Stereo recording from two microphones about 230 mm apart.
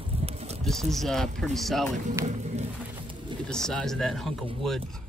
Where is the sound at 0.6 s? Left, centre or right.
Centre.